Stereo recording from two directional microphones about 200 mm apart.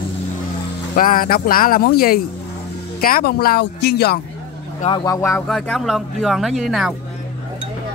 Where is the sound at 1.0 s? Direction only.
45° left (ahead or behind).